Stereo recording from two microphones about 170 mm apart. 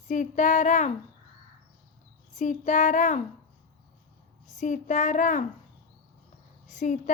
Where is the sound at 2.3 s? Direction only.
45° left (ahead or behind).